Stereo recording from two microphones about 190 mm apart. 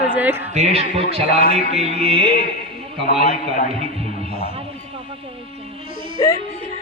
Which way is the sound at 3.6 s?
30° right (ahead or behind).